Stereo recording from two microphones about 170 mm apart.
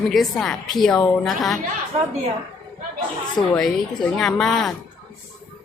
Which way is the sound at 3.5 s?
5° left (ahead or behind).